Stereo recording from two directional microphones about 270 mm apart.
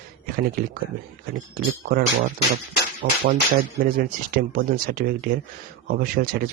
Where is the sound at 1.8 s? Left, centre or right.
Right.